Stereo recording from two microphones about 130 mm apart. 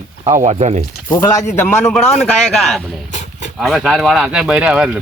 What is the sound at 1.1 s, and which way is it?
Speech, 25° left (ahead or behind).